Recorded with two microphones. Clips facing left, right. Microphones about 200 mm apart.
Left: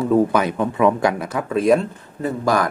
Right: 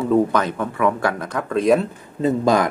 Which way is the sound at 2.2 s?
20° right (ahead or behind).